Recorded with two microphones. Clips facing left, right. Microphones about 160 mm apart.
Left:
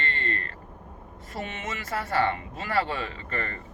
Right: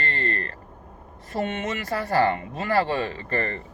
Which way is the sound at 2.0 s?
35° right (ahead or behind).